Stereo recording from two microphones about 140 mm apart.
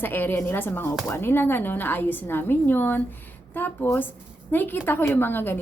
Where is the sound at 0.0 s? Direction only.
15° left (ahead or behind).